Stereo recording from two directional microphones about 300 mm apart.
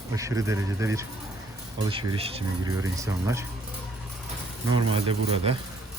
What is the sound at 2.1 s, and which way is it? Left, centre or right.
Speech, centre.